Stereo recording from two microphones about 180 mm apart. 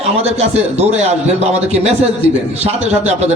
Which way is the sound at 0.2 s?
35° right (ahead or behind).